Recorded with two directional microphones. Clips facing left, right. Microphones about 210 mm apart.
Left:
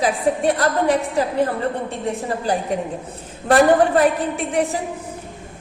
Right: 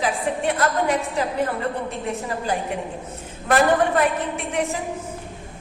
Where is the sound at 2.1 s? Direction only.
35° left (ahead or behind).